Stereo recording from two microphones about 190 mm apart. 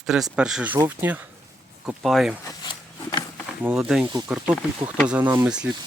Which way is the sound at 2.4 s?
25° left (ahead or behind).